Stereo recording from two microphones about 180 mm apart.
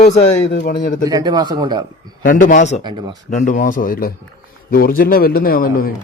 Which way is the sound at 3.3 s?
45° left (ahead or behind).